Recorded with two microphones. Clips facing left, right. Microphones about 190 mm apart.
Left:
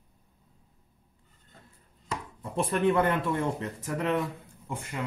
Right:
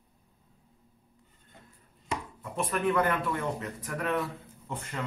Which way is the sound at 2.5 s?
30° left (ahead or behind).